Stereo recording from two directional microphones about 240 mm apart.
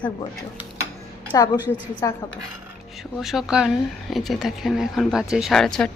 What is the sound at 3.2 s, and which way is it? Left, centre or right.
Speech, centre.